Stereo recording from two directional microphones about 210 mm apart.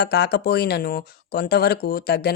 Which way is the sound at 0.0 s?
50° left (ahead or behind).